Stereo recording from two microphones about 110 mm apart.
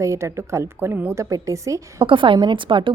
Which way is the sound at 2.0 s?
50° right (ahead or behind).